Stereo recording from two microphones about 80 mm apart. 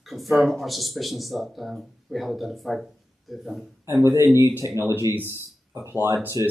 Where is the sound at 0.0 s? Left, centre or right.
Centre.